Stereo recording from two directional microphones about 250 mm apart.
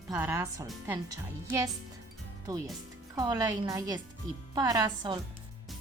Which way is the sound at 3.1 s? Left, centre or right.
Centre.